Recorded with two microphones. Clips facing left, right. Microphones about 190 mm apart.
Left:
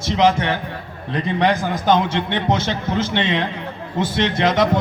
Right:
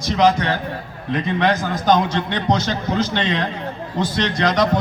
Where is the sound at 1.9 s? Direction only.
25° left (ahead or behind).